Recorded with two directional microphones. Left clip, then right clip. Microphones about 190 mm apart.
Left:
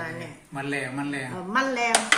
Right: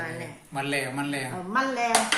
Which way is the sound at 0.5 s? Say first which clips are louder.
Right 1 dB; 20° right (ahead or behind).